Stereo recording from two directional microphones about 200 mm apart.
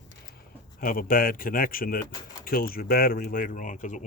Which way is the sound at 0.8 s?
45° left (ahead or behind).